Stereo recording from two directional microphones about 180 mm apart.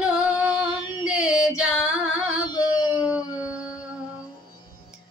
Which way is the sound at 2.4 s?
20° left (ahead or behind).